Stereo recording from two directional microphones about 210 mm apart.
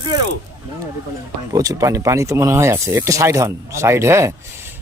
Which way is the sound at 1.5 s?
15° right (ahead or behind).